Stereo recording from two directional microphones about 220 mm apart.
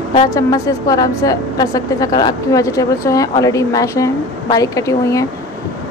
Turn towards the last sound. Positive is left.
turn(degrees=15)  # may be behind; listen again after turning